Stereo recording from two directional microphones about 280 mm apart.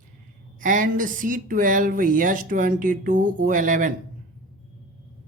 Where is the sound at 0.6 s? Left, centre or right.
Right.